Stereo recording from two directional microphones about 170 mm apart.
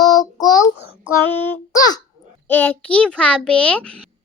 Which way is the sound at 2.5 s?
10° left (ahead or behind).